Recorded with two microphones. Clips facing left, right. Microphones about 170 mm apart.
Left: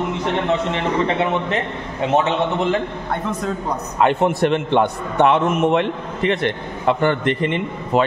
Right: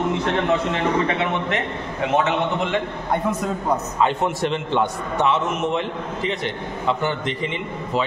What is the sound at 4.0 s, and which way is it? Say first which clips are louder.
A man's voice: left 7 dB; 60° left (ahead or behind).